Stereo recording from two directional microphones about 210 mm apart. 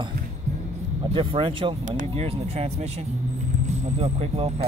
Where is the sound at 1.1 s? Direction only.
25° right (ahead or behind).